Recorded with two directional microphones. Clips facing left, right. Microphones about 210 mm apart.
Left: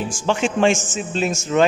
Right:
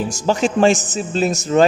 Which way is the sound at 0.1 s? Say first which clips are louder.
Right 2 dB; 40° right (ahead or behind).